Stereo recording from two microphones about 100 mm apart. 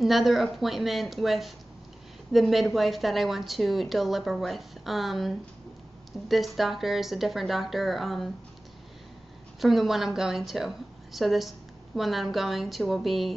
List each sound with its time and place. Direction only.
0.0 s a woman's voice: centre (ahead or behind)
9.6 s a woman's voice: centre (ahead or behind)